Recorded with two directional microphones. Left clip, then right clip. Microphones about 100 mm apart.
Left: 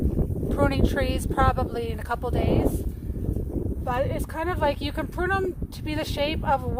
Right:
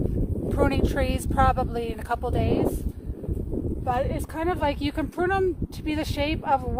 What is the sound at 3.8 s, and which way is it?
Speech, 50° right (ahead or behind).